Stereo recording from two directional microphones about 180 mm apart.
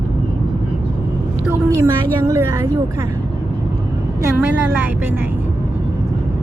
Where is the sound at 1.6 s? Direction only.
15° right (ahead or behind).